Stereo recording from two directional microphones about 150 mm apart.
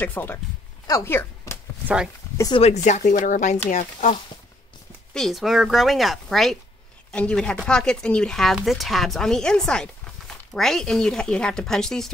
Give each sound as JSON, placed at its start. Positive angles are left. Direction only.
{"t": 0.0, "sound": "speech", "side_deg": 10}
{"t": 2.5, "sound": "speech", "side_deg": 45}
{"t": 5.1, "sound": "speech", "side_deg": 0}